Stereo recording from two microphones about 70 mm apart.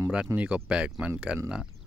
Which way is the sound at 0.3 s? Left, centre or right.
Right.